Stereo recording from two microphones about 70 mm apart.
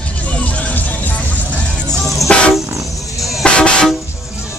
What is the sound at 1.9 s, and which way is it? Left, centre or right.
Music, centre.